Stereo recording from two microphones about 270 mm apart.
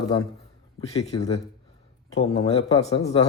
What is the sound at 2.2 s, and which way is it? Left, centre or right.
Speech, centre.